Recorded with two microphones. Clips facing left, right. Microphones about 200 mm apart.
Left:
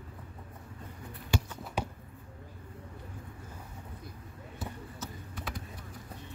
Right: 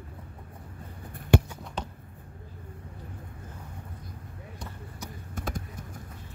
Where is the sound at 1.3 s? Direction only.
60° right (ahead or behind).